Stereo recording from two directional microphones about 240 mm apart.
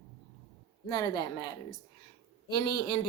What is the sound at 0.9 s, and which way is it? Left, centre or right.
Speech, centre.